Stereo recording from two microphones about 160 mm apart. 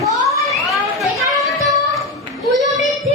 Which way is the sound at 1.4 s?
Centre (ahead or behind).